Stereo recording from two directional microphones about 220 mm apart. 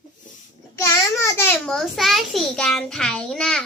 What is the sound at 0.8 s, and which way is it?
A child's voice, 10° left (ahead or behind).